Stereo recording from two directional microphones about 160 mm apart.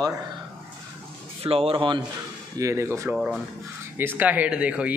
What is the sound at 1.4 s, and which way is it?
Speech, 35° right (ahead or behind).